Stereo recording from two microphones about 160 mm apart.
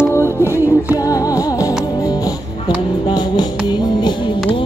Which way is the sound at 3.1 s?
25° left (ahead or behind).